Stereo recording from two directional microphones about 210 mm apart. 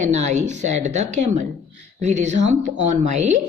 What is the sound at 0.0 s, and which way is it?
A woman's voice, 35° right (ahead or behind).